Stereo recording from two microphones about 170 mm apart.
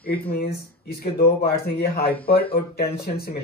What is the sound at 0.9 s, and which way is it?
Speech, 65° left (ahead or behind).